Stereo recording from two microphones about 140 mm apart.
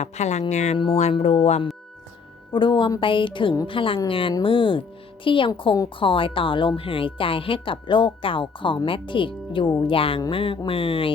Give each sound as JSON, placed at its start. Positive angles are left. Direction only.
{"t": 0.0, "sound": "speech", "side_deg": 55}
{"t": 2.5, "sound": "a woman's voice", "side_deg": 35}